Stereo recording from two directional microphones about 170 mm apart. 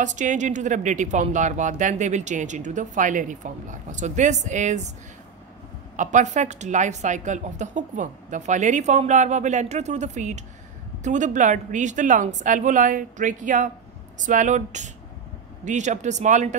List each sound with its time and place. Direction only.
0.0 s speech: 45° right (ahead or behind)
5.9 s speech: 45° right (ahead or behind)